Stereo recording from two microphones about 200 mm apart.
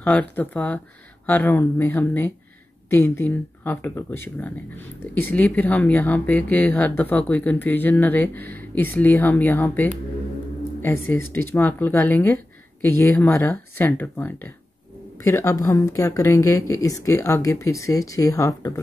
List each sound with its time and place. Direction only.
0.0 s speech: 10° left (ahead or behind)